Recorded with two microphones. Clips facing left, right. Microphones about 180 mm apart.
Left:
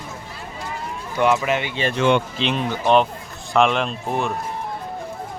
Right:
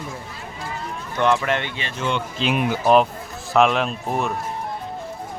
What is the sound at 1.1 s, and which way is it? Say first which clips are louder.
Speech: left 1 dB; 10° left (ahead or behind).